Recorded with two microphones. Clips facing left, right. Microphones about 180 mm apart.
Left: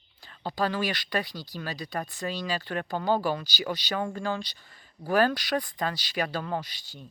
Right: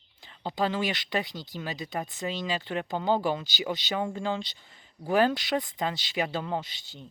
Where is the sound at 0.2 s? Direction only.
20° right (ahead or behind).